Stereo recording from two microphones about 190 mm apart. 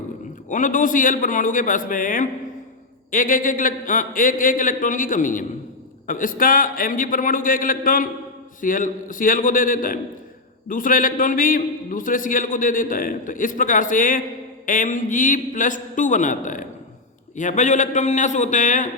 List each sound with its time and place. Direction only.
0.4 s a man's voice: 45° left (ahead or behind)